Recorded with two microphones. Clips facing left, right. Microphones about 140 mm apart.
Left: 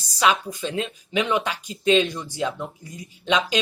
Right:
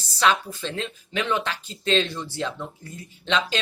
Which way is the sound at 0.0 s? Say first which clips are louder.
Left 1 dB; 10° left (ahead or behind).